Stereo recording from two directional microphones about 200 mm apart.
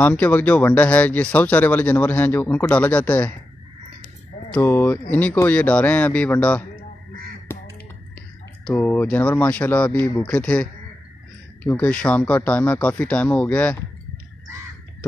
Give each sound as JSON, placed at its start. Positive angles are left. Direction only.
{"t": 0.0, "sound": "speech", "side_deg": 10}
{"t": 4.5, "sound": "speech", "side_deg": 10}
{"t": 7.5, "sound": "caw", "side_deg": 10}
{"t": 8.6, "sound": "speech", "side_deg": 10}